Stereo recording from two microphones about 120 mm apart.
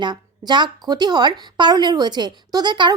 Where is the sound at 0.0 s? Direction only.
40° right (ahead or behind).